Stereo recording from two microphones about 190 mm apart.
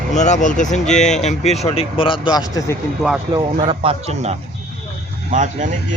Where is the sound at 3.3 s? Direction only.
30° right (ahead or behind).